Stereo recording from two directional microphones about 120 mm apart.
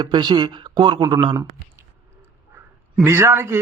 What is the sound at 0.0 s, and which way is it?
Speech, 40° right (ahead or behind).